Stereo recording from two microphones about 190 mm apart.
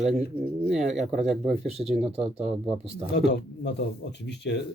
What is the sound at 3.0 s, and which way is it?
Speech, 60° left (ahead or behind).